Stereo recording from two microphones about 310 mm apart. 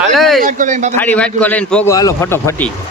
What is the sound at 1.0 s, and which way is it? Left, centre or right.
A man's voice, centre.